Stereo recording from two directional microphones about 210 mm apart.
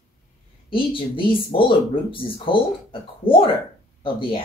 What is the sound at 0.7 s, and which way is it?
Speech, 25° left (ahead or behind).